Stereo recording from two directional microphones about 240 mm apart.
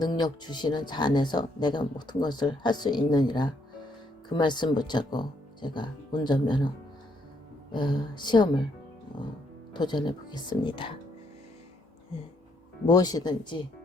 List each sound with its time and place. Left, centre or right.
0.0 s speech: centre
7.7 s speech: centre
9.7 s speech: centre
12.8 s speech: centre